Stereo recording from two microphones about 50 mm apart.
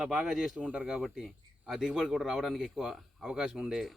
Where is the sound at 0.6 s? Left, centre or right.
Right.